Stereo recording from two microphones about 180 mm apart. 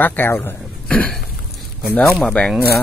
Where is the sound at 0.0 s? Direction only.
10° left (ahead or behind).